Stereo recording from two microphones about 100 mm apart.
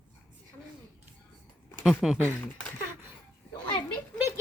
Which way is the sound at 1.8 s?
Centre (ahead or behind).